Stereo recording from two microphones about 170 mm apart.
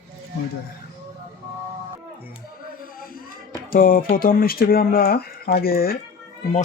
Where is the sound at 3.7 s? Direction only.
55° left (ahead or behind).